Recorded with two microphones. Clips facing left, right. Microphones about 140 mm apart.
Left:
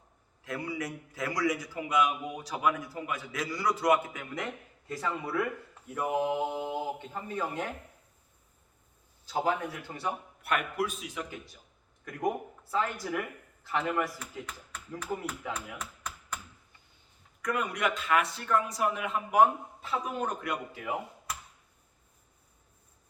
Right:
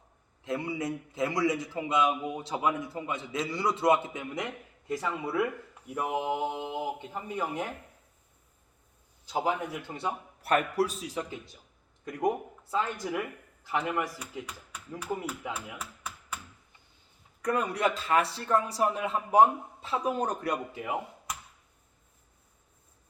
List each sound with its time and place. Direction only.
0.4 s a man's voice: 25° right (ahead or behind)
9.2 s speech: 15° right (ahead or behind)
10.4 s a man's voice: 35° right (ahead or behind)
12.7 s a man's voice: 10° right (ahead or behind)
17.4 s a man's voice: 30° right (ahead or behind)
20.7 s speech: 20° right (ahead or behind)